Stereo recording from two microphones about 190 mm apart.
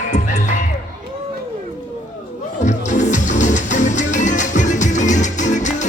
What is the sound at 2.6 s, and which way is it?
Music, 40° left (ahead or behind).